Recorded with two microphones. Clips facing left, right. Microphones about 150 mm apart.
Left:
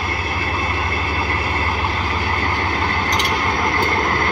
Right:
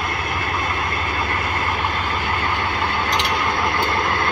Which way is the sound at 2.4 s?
40° left (ahead or behind).